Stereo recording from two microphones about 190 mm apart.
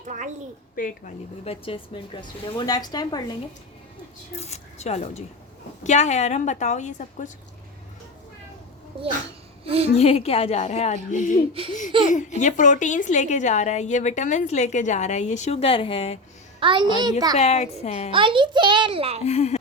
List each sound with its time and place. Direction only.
0.0 s a child's voice: 40° right (ahead or behind)
0.8 s speech: 45° left (ahead or behind)
1.5 s a woman's voice: 30° left (ahead or behind)
4.4 s a woman's voice: 35° left (ahead or behind)
9.6 s a woman's voice: 30° right (ahead or behind)
9.9 s a woman's voice: 30° left (ahead or behind)
16.6 s a child's voice: 25° right (ahead or behind)
17.3 s a woman's voice: 35° left (ahead or behind)
18.1 s a child's voice: 25° right (ahead or behind)
19.2 s a woman's voice: 35° left (ahead or behind)